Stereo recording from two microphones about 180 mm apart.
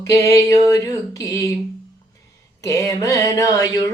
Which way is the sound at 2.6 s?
20° left (ahead or behind).